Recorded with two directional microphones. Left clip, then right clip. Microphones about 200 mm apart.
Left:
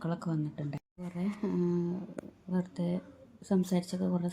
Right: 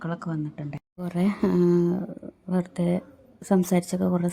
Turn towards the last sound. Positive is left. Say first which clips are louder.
# right 9 dB
turn(degrees=-40)  # may be behind; listen again after turning